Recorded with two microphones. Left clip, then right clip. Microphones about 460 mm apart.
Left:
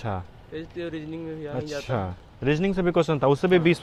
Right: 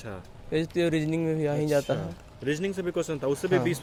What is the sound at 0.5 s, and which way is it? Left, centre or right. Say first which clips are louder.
Speech: right 7 dB; right.